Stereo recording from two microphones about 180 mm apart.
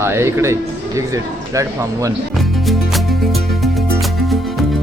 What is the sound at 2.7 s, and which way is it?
Music, centre (ahead or behind).